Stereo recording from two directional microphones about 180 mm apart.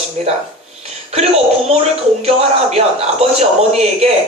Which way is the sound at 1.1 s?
35° right (ahead or behind).